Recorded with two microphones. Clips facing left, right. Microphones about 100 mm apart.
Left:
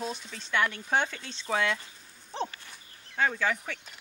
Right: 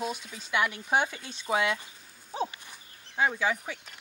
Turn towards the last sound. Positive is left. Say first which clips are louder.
# right 1 dB
turn(degrees=-10)  # may be behind; listen again after turning